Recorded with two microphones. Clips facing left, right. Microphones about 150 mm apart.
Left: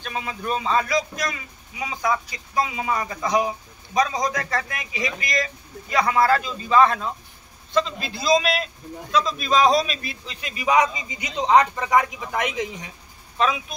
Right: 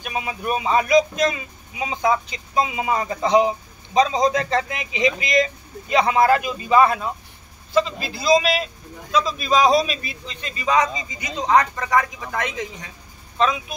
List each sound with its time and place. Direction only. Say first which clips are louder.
0.0 s a man's voice: right 3 dB; 10° right (ahead or behind); by 12.9 s 20° left (ahead or behind)
13.4 s a man's voice: right 2 dB; 5° left (ahead or behind)